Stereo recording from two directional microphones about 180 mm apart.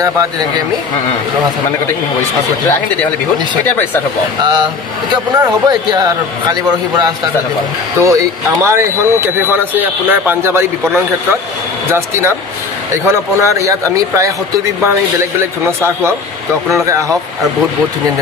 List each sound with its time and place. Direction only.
5.1 s a man's voice: 25° right (ahead or behind)
11.9 s speech: 15° right (ahead or behind)
15.6 s speech: 15° right (ahead or behind)